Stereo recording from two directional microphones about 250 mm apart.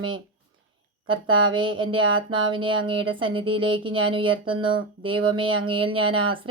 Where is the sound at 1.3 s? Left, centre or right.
Centre.